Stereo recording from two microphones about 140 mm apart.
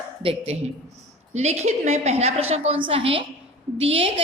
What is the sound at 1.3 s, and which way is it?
A woman's voice, 50° right (ahead or behind).